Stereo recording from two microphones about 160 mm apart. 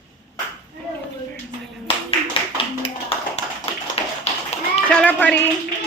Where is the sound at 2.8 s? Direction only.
40° left (ahead or behind).